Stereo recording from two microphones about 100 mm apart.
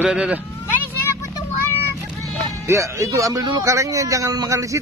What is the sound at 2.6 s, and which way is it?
A man's voice, 30° right (ahead or behind).